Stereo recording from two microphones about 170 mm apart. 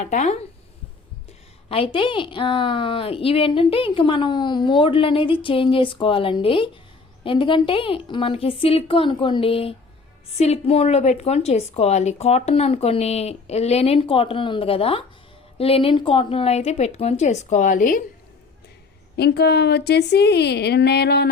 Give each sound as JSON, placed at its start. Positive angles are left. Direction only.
{"t": 0.0, "sound": "speech", "side_deg": 45}
{"t": 1.7, "sound": "a woman's voice", "side_deg": 30}
{"t": 19.1, "sound": "a woman's voice", "side_deg": 80}